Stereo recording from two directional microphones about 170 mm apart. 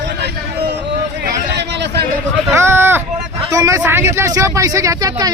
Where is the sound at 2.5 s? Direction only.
15° right (ahead or behind).